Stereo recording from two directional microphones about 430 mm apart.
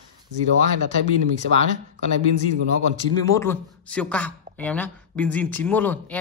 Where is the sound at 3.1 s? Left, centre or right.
Centre.